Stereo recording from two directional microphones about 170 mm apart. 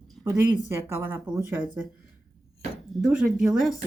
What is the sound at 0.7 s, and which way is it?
Speech, 15° right (ahead or behind).